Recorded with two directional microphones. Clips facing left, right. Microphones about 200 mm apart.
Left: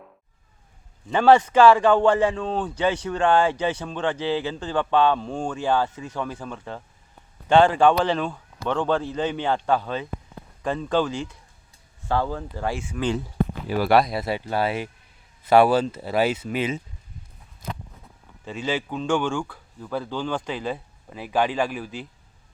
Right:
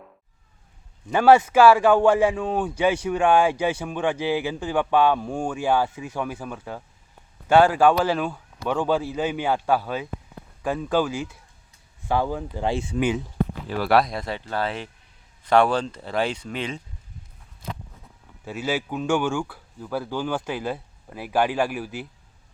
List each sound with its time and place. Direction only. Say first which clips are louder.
1.1 s speech: even; 10° right (ahead or behind)
18.4 s speech: even; 5° right (ahead or behind)